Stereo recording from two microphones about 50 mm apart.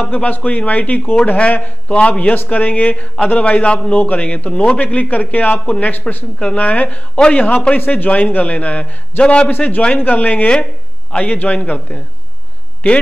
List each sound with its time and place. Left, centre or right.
0.0 s a man's voice: left
2.3 s a man's voice: left
7.2 s a man's voice: centre
7.7 s a man's voice: left
9.5 s a man's voice: left